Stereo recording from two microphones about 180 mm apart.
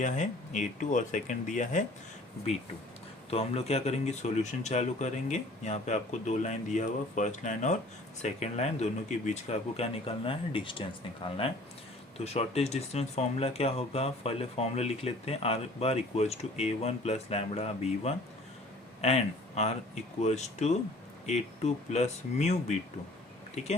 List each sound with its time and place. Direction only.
0.0 s speech: 45° left (ahead or behind)
3.2 s speech: 35° left (ahead or behind)
23.6 s speech: 40° left (ahead or behind)